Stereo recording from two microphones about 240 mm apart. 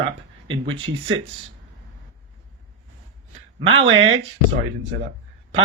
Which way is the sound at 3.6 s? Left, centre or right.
Right.